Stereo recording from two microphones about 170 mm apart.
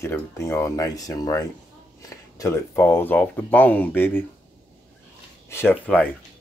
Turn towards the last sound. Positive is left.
turn(degrees=10)  # may be behind; listen again after turning